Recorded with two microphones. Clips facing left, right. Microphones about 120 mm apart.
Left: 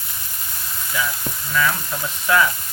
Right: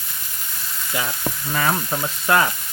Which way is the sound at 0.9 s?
50° right (ahead or behind).